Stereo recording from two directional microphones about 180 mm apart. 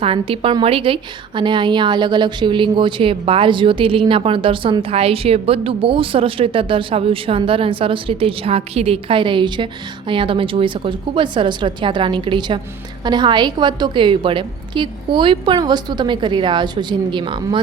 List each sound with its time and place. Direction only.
0.0 s a woman's voice: 30° right (ahead or behind)